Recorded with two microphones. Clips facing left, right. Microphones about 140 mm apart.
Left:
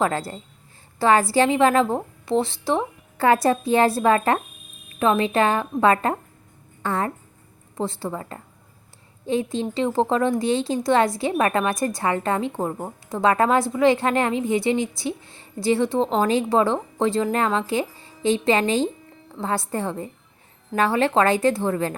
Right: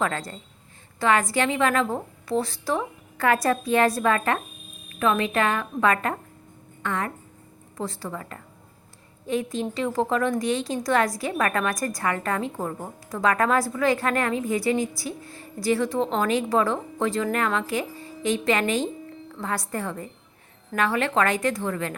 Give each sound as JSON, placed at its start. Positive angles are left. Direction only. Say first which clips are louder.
{"t": 0.0, "sound": "speech", "louder": "left 4 dB", "side_deg": 30}